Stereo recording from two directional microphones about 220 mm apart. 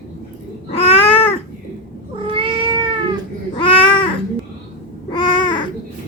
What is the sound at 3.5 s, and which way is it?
Babbling, 20° left (ahead or behind).